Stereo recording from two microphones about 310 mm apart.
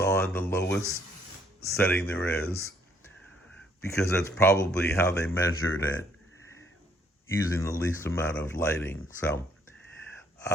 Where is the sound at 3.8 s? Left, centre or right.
Centre.